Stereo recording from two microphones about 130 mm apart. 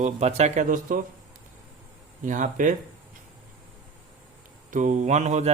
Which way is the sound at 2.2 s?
80° right.